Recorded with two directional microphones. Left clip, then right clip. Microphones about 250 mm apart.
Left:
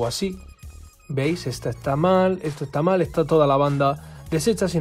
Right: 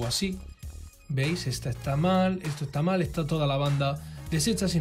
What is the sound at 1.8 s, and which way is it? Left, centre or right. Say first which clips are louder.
Speech: left 8 dB; centre.